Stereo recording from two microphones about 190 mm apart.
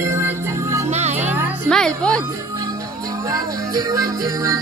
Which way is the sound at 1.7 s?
5° left (ahead or behind).